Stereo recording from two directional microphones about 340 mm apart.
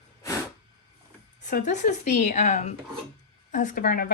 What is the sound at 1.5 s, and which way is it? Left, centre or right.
Speech, left.